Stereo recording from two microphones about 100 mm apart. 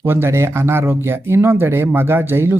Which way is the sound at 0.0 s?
25° right (ahead or behind).